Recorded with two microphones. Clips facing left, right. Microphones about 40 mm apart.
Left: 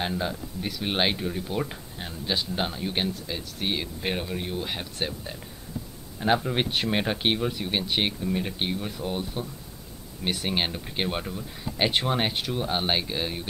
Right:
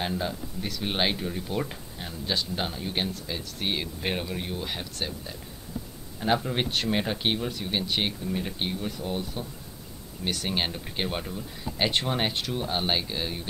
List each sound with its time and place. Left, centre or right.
0.0 s speech: centre
6.1 s speech: centre